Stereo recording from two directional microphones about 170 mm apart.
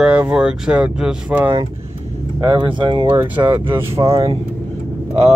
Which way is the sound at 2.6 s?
25° right (ahead or behind).